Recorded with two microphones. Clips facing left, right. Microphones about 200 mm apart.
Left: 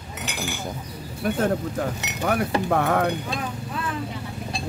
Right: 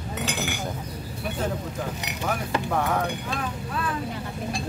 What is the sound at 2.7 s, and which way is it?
Speech, 65° left (ahead or behind).